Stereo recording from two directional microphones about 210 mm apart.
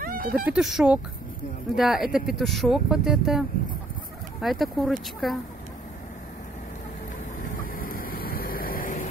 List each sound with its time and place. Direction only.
0.0 s a sound: 45° right (ahead or behind)
0.5 s speech: centre (ahead or behind)
7.4 s vehicle: 40° left (ahead or behind)